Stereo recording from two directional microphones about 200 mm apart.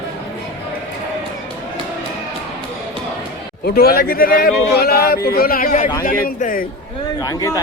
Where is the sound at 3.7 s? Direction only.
50° left (ahead or behind).